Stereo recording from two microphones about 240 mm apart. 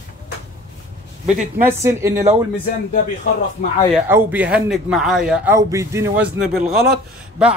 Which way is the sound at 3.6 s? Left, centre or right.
Left.